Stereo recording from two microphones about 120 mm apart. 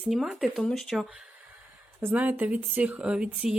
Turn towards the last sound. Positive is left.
turn(degrees=-5)  # may be behind; listen again after turning